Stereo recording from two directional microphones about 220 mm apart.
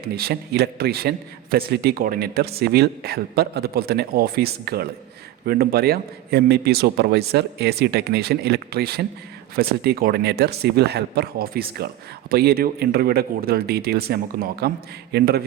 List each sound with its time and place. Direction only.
0.0 s a man's voice: 45° right (ahead or behind)